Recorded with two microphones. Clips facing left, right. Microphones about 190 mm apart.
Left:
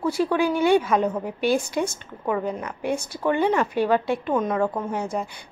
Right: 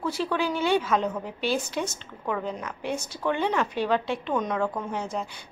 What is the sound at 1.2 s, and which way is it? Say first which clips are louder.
Speech: left 5 dB; 50° left (ahead or behind).